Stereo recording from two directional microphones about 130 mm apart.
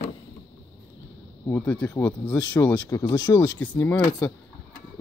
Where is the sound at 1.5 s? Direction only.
15° left (ahead or behind).